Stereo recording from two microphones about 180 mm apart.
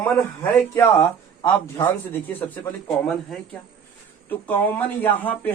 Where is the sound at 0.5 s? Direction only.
10° left (ahead or behind).